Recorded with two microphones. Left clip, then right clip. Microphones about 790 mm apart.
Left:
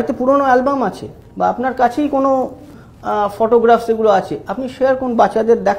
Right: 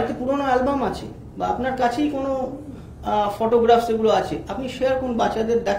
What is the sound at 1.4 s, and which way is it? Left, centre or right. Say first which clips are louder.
A man's voice: left 7 dB; left.